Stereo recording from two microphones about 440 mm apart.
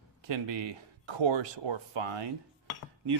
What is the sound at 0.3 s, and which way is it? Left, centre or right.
Speech, right.